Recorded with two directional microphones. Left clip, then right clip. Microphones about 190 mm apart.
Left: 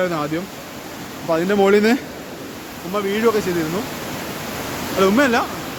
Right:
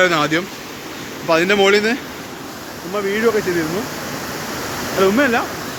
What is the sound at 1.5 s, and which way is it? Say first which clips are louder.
Speech: right 1 dB; 35° left (ahead or behind).